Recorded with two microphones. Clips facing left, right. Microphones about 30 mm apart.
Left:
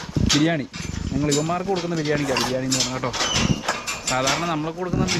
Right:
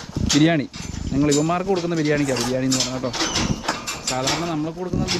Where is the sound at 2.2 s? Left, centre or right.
Centre.